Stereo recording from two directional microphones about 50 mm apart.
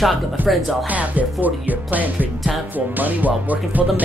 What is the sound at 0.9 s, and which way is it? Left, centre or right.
Music, right.